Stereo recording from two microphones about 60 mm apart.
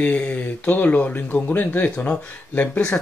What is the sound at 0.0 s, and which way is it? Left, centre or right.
Speech, centre.